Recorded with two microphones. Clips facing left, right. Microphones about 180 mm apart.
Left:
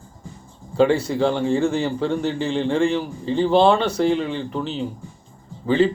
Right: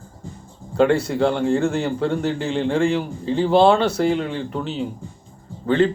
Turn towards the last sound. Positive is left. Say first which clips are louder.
# even
turn(degrees=5)  # may be behind; listen again after turning